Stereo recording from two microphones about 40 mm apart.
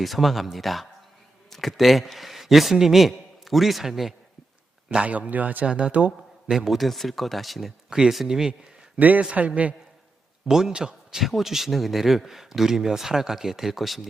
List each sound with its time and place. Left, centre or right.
0.0 s a man's voice: centre
4.9 s speech: right
5.3 s speech: right
5.6 s speech: right
6.7 s speech: centre
7.9 s speech: centre
9.0 s speech: right
10.7 s a man's voice: right
11.2 s speech: centre